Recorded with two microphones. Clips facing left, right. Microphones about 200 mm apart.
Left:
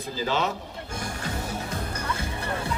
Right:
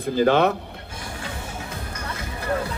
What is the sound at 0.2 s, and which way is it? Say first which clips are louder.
Speech: right 9 dB; 60° right (ahead or behind).